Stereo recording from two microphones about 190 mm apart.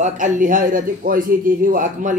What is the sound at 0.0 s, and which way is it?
A man's voice, 45° right (ahead or behind).